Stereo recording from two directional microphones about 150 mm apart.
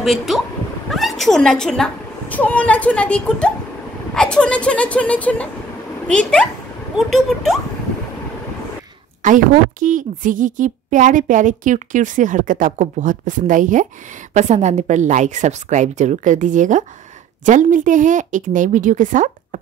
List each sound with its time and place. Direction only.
0.0 s speech: centre (ahead or behind)
7.0 s speech: centre (ahead or behind)
9.2 s a woman's voice: 60° right (ahead or behind)